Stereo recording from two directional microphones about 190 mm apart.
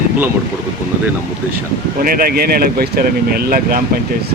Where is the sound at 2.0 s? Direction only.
50° right (ahead or behind).